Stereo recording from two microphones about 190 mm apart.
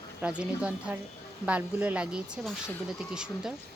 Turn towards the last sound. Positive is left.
turn(degrees=-5)  # may be behind; listen again after turning